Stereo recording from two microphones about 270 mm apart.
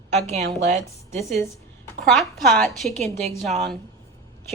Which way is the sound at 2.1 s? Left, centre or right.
Centre.